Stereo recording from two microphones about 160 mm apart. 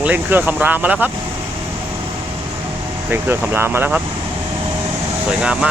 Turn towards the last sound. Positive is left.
turn(degrees=-5)  # may be behind; listen again after turning